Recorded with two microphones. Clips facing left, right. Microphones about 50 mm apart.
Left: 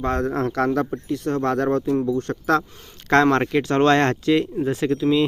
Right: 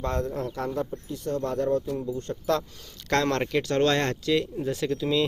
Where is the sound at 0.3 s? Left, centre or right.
Left.